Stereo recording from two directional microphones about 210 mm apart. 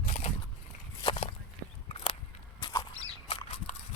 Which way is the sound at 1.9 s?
25° left (ahead or behind).